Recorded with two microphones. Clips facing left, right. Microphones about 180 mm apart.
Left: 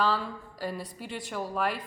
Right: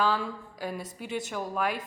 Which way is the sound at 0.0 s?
Centre (ahead or behind).